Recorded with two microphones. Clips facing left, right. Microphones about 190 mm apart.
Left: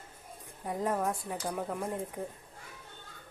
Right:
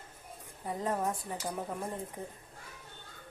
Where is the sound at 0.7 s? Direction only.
10° left (ahead or behind).